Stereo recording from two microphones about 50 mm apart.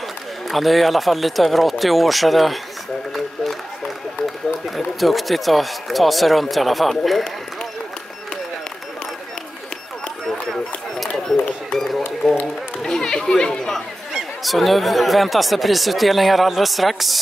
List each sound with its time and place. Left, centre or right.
0.5 s speech: centre
4.6 s speech: centre
12.2 s run: centre
12.8 s chatter: centre
14.4 s speech: centre